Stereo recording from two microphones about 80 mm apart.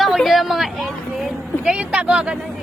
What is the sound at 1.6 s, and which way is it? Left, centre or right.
Speech, centre.